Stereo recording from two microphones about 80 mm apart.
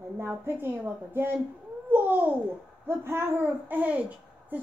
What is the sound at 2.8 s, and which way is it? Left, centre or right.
Hoot, right.